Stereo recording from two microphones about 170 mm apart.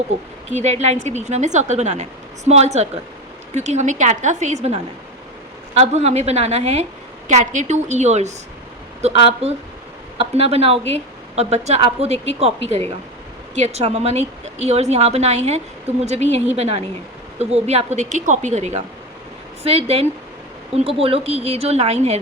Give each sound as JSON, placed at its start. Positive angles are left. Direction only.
{"t": 0.5, "sound": "a woman's voice", "side_deg": -40}
{"t": 13.6, "sound": "a woman's voice", "side_deg": -40}